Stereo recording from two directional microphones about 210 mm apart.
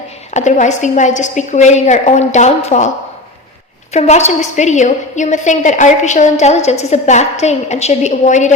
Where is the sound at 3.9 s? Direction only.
35° left (ahead or behind).